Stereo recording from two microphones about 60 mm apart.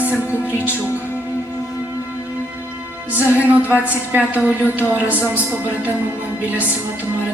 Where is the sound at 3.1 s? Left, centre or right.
Right.